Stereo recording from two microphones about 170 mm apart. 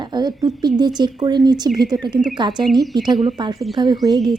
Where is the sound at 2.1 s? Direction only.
5° right (ahead or behind).